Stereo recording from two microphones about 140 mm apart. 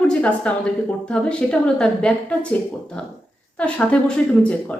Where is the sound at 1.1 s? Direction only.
5° left (ahead or behind).